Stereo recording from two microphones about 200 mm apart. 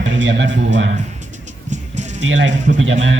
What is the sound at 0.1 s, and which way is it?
Speech, 70° right (ahead or behind).